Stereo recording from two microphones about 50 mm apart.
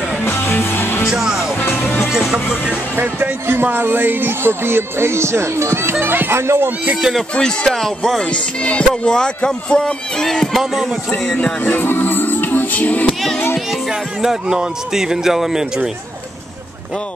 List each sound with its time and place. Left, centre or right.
0.2 s music: left
1.1 s speech: centre
1.6 s music: left
2.5 s speech: centre
3.0 s speech: right
7.2 s speech: centre
7.7 s music: centre
8.2 s music: left
9.0 s speech: centre
10.6 s speech: centre
11.6 s music: left
13.7 s speech: centre